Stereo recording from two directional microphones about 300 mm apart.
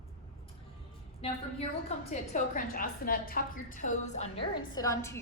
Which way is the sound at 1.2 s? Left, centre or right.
Centre.